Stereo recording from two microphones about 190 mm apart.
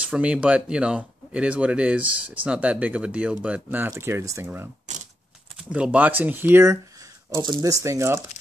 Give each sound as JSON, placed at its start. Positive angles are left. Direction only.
{"t": 0.1, "sound": "speech", "side_deg": -5}
{"t": 4.9, "sound": "a sound", "side_deg": -40}
{"t": 5.6, "sound": "speech", "side_deg": -5}